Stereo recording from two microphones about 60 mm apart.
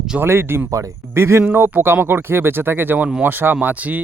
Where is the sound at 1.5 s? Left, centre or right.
Right.